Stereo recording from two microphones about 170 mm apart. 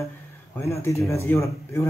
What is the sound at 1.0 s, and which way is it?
Speech, 15° left (ahead or behind).